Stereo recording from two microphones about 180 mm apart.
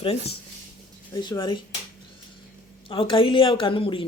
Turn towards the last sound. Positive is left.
turn(degrees=30)  # may be behind; listen again after turning